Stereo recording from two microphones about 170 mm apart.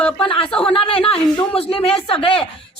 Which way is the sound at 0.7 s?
35° left (ahead or behind).